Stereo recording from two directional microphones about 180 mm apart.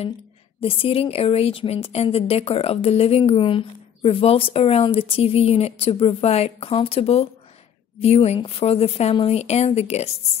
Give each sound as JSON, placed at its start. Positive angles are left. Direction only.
{"t": 0.6, "sound": "a woman's voice", "side_deg": 30}